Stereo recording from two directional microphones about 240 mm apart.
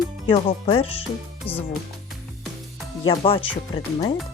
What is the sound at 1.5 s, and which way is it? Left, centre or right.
Speech, centre.